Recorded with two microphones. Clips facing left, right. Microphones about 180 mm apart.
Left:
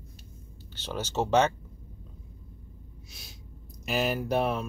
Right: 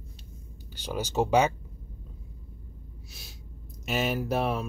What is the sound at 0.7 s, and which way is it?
Speech, 10° right (ahead or behind).